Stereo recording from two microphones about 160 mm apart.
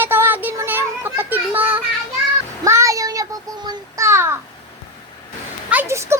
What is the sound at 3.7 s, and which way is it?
Child singing, 20° right (ahead or behind).